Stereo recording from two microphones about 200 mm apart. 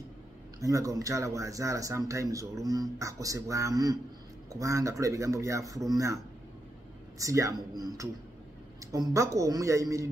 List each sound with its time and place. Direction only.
0.6 s speech: 15° right (ahead or behind)
7.2 s speech: 15° right (ahead or behind)